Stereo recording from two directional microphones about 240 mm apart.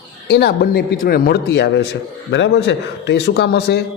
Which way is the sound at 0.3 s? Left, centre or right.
Left.